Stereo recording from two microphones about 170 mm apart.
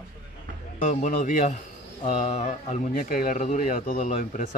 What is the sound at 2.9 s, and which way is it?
Speech, 55° left (ahead or behind).